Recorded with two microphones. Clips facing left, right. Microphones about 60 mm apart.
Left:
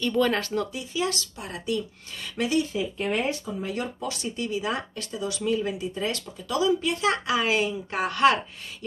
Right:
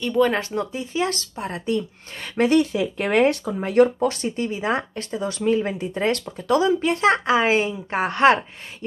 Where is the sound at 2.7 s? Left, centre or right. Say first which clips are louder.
Right 6 dB; right.